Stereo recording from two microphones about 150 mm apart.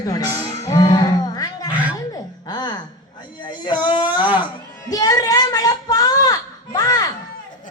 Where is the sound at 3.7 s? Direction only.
35° left (ahead or behind).